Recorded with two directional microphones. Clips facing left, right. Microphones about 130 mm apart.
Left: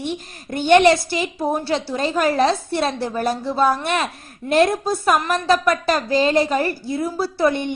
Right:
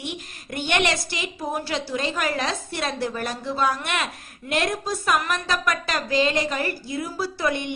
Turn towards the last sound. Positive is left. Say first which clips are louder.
# left 6 dB
turn(degrees=35)  # may be behind; listen again after turning